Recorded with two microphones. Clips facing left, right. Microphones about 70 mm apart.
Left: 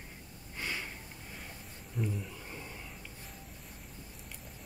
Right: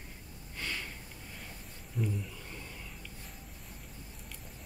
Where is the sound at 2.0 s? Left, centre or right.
Centre.